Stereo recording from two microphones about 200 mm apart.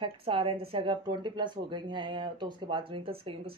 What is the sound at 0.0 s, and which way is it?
Speech, 25° right (ahead or behind).